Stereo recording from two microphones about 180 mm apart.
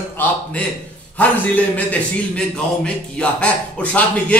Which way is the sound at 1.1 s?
10° left (ahead or behind).